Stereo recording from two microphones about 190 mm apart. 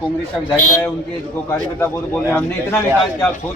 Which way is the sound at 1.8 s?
10° left (ahead or behind).